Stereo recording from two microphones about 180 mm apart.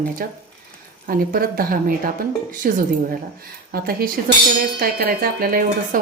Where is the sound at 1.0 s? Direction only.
55° right (ahead or behind).